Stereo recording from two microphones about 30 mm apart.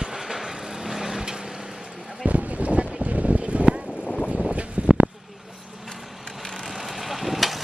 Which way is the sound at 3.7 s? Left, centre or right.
Right.